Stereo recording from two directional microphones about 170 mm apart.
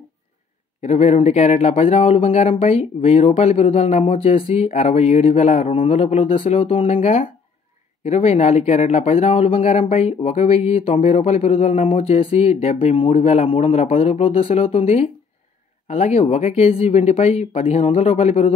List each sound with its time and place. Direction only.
0.8 s speech: 40° left (ahead or behind)